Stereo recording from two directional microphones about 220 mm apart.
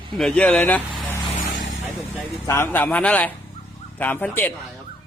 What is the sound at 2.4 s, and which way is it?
Speech, 10° left (ahead or behind).